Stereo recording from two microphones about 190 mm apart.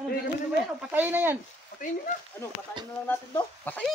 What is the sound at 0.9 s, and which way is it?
Speech, 10° right (ahead or behind).